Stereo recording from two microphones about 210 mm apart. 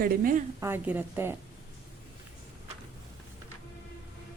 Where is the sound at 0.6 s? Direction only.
10° right (ahead or behind).